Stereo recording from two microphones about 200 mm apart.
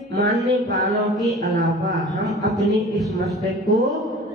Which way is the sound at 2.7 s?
Centre (ahead or behind).